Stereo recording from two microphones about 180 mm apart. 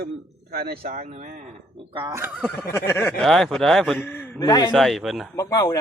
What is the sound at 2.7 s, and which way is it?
Speech, 15° left (ahead or behind).